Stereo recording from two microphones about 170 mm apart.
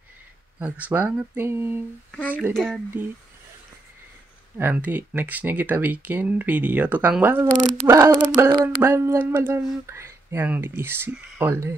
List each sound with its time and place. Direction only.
0.6 s speech: 10° right (ahead or behind)
2.1 s speech: 10° left (ahead or behind)
4.6 s speech: 10° right (ahead or behind)